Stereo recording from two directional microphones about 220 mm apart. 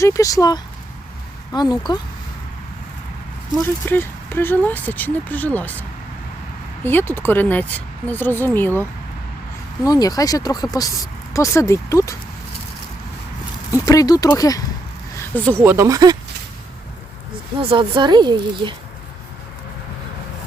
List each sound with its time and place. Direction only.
0.0 s speech: 15° left (ahead or behind)
3.8 s speech: 10° left (ahead or behind)
6.8 s speech: 10° left (ahead or behind)
13.8 s speech: 15° left (ahead or behind)
15.5 s speech: 10° right (ahead or behind)
17.6 s speech: 25° right (ahead or behind)